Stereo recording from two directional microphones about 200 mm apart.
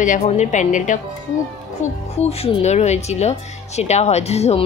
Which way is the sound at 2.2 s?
30° left (ahead or behind).